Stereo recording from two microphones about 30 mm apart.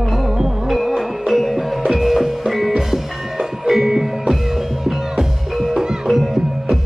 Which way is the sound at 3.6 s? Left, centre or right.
Centre.